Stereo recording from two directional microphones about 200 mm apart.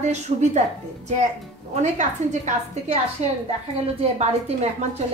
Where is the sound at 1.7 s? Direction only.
35° right (ahead or behind).